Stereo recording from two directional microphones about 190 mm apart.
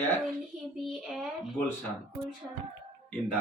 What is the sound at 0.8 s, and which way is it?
Speech, centre (ahead or behind).